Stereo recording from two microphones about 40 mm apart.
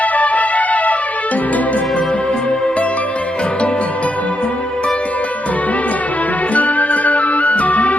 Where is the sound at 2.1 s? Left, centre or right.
Left.